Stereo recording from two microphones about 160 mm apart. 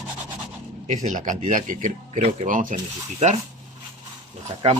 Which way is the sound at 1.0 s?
50° right (ahead or behind).